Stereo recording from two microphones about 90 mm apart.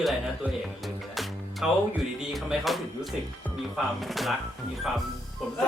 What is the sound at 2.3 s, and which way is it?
A man's voice, centre (ahead or behind).